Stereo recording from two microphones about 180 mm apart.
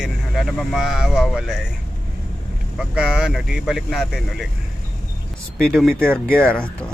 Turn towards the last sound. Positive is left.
turn(degrees=5)  # may be behind; listen again after turning